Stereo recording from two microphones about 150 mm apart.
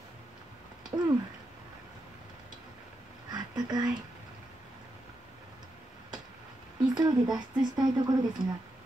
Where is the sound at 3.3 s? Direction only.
25° right (ahead or behind).